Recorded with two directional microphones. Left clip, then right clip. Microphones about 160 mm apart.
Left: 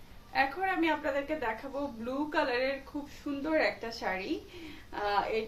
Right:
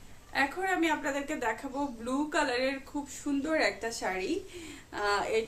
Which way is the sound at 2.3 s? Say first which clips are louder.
Even; 25° right (ahead or behind).